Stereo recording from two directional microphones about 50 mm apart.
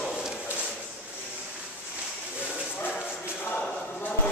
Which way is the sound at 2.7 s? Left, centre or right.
Left.